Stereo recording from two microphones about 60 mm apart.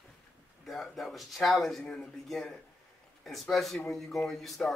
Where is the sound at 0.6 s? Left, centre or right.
Centre.